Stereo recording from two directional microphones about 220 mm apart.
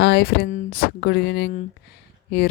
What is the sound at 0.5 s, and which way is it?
Speech, 35° left (ahead or behind).